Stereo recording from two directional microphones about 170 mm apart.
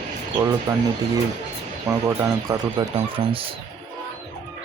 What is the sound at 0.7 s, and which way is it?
Speech, 20° right (ahead or behind).